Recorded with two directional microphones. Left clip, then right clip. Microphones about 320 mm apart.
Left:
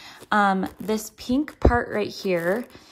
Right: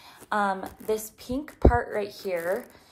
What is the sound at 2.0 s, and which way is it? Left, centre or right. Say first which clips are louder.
Speech: left 5 dB; left.